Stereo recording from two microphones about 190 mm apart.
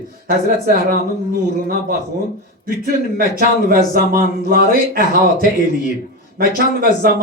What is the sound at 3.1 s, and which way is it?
A man's voice, 50° right (ahead or behind).